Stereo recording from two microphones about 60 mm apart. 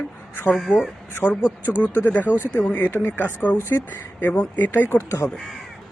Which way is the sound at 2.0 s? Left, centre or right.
Left.